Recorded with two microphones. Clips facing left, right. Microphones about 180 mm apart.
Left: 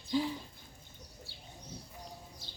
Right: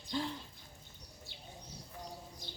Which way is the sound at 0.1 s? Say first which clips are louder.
Left 5 dB; 5° left (ahead or behind).